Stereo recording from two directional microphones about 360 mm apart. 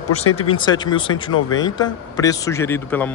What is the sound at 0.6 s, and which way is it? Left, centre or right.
A man's voice, centre.